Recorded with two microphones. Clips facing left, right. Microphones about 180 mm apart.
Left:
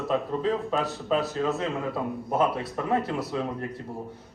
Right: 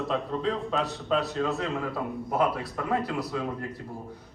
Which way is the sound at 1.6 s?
20° left (ahead or behind).